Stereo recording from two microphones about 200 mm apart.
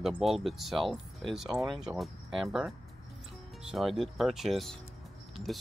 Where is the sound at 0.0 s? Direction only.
Centre (ahead or behind).